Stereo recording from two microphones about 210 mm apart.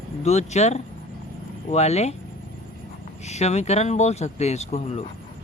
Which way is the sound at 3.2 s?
30° left (ahead or behind).